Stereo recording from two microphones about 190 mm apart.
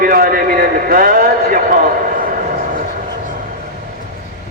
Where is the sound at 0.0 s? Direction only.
50° right (ahead or behind).